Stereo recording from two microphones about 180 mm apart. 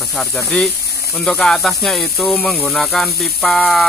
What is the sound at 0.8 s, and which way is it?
Snake, 65° left (ahead or behind).